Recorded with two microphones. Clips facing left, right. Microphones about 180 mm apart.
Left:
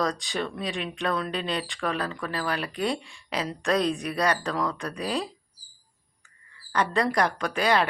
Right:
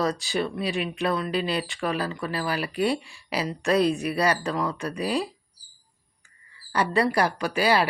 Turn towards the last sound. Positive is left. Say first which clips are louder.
# right 1 dB
turn(degrees=-5)  # may be behind; listen again after turning